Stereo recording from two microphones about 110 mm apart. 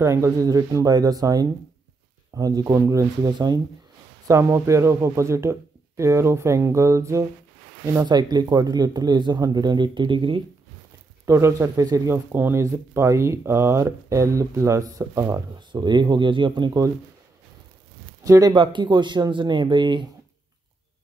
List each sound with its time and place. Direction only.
0.0 s speech: 25° right (ahead or behind)
4.3 s speech: 25° right (ahead or behind)
8.1 s speech: 40° right (ahead or behind)
11.2 s speech: 25° right (ahead or behind)
15.7 s speech: 45° right (ahead or behind)
18.2 s speech: 30° right (ahead or behind)
18.5 s speech: 45° right (ahead or behind)